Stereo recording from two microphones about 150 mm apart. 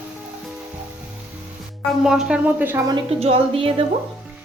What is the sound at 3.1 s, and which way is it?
Speech, 40° right (ahead or behind).